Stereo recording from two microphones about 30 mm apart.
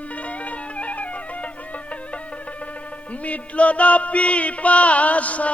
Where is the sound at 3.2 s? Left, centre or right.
Left.